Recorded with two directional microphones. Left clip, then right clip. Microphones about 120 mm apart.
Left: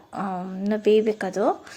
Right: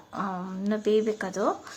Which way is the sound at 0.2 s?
20° left (ahead or behind).